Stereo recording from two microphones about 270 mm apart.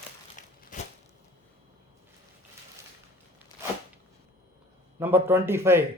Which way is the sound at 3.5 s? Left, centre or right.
Centre.